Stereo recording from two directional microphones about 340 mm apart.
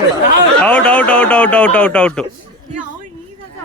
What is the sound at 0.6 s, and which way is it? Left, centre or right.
Speech, centre.